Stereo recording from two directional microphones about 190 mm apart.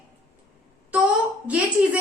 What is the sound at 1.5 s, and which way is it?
Speech, 5° right (ahead or behind).